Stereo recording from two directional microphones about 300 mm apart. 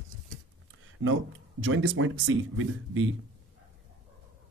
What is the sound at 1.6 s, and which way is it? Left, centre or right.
Speech, right.